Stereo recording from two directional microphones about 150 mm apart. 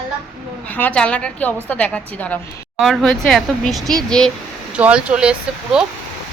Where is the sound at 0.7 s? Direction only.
10° left (ahead or behind).